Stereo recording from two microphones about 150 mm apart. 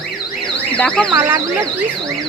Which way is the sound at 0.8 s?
5° left (ahead or behind).